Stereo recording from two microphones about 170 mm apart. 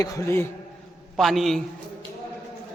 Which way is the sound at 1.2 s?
Centre (ahead or behind).